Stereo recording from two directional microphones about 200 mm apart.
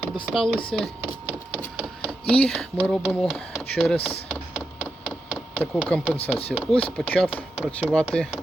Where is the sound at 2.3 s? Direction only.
5° left (ahead or behind).